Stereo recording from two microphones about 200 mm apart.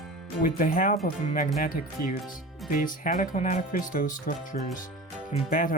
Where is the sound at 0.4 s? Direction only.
45° left (ahead or behind).